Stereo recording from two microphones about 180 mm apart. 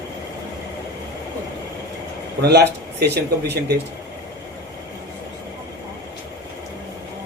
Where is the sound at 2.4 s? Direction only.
65° right (ahead or behind).